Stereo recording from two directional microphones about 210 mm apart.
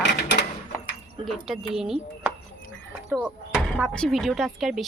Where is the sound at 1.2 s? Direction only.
Centre (ahead or behind).